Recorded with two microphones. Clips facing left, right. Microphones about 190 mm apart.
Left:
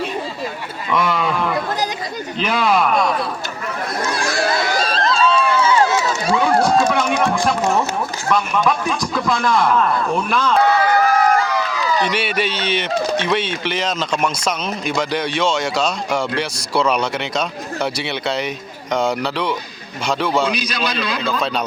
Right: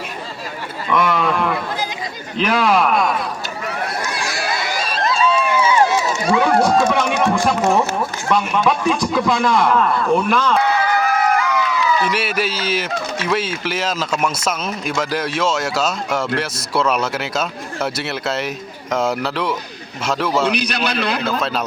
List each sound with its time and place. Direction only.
0.9 s a sound: centre (ahead or behind)
2.4 s speech: 5° right (ahead or behind)
4.9 s a sound: 10° right (ahead or behind)
6.3 s speech: 5° right (ahead or behind)
10.8 s run: 45° left (ahead or behind)
12.0 s speech: 5° right (ahead or behind)
20.7 s a man's voice: 65° right (ahead or behind)